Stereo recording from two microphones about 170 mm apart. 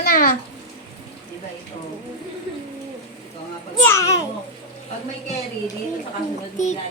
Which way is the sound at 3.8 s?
15° left (ahead or behind).